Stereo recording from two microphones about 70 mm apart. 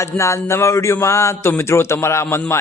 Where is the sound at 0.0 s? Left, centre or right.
Left.